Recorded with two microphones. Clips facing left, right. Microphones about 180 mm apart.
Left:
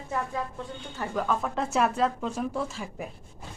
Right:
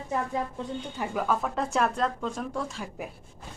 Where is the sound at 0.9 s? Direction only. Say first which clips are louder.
Even; 10° right (ahead or behind).